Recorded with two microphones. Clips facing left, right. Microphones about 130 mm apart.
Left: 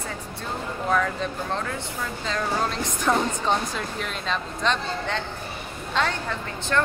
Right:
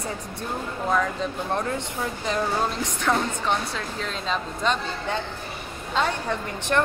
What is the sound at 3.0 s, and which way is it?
Speech, 10° left (ahead or behind).